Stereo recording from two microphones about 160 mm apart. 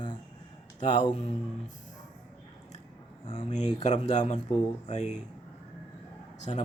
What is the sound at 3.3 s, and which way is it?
Speech, 45° left (ahead or behind).